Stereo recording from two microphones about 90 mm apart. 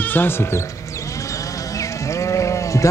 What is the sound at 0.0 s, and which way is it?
Speech, 20° left (ahead or behind).